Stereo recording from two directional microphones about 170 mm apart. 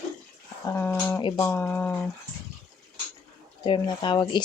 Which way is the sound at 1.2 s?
30° left (ahead or behind).